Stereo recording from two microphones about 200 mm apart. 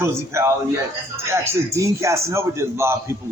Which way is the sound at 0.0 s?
15° right (ahead or behind).